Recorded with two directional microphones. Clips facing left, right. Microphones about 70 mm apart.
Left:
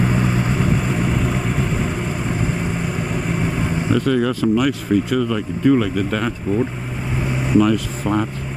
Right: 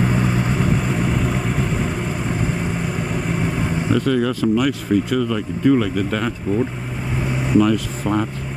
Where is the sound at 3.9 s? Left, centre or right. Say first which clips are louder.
Left 1 dB; centre.